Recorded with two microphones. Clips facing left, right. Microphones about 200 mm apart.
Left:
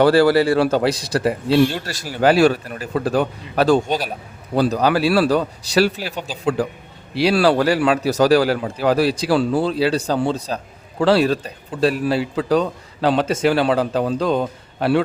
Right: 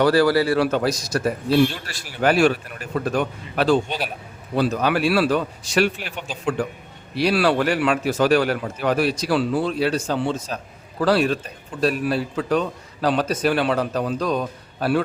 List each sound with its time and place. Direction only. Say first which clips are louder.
0.0 s a man's voice: left 3 dB; 30° left (ahead or behind)